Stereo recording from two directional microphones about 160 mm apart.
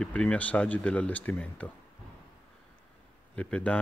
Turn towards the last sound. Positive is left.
turn(degrees=10)  # may be behind; listen again after turning